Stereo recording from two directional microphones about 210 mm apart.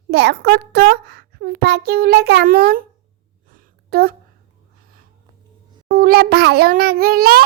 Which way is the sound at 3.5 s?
45° right (ahead or behind).